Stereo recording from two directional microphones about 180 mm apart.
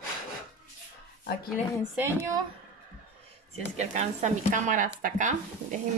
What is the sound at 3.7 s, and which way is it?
Speech, 40° right (ahead or behind).